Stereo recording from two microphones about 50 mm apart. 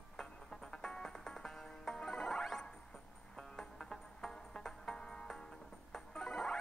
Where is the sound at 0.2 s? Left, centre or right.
Centre.